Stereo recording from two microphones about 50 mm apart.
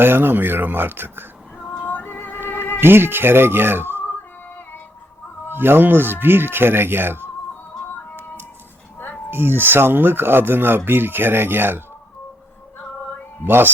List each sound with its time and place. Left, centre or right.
0.0 s speech: right
1.8 s music: left
2.8 s speech: right
4.0 s female singing: left
5.5 s speech: right
9.3 s speech: right
13.4 s speech: right